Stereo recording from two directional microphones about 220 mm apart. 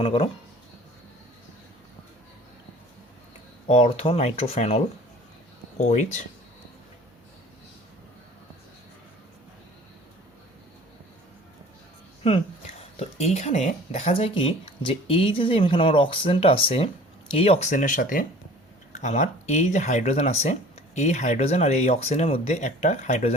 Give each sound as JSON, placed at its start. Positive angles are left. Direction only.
{"t": 0.0, "sound": "speech", "side_deg": 25}
{"t": 3.7, "sound": "speech", "side_deg": 25}
{"t": 5.8, "sound": "speech", "side_deg": 30}
{"t": 12.2, "sound": "speech", "side_deg": 25}